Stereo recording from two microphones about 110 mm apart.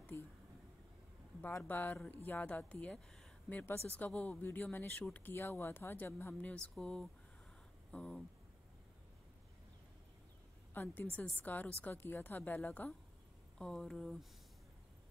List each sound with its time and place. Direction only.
0.1 s a sound: 20° left (ahead or behind)
1.6 s speech: 15° left (ahead or behind)
6.7 s speech: 5° left (ahead or behind)
10.7 s a woman's voice: 15° left (ahead or behind)
13.6 s speech: 5° left (ahead or behind)